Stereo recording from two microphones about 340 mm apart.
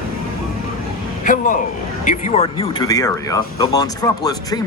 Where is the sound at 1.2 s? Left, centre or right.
Left.